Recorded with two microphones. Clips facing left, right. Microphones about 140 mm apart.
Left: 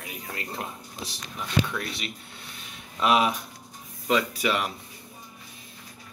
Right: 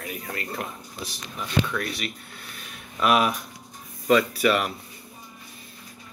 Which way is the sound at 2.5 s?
25° left (ahead or behind).